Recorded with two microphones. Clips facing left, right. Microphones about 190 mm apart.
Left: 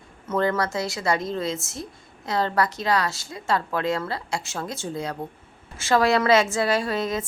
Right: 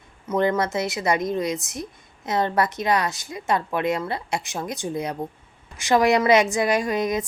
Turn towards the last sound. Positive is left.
turn(degrees=-15)  # may be behind; listen again after turning